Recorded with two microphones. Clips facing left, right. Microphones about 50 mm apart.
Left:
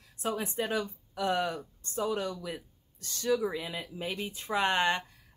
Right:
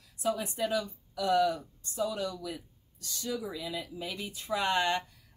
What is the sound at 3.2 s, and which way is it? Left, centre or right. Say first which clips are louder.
Speech: left 6 dB; left.